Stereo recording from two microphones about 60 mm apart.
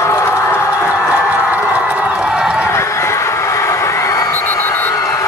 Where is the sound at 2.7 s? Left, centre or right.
Left.